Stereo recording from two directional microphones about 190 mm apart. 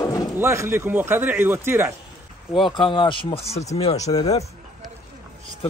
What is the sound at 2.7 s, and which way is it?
Speech, 25° left (ahead or behind).